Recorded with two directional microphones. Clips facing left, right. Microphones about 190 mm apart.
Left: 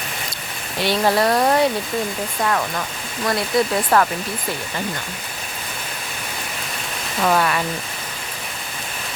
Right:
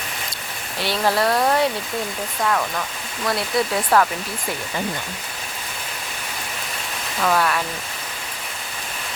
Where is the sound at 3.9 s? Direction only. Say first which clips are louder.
Even; 5° right (ahead or behind).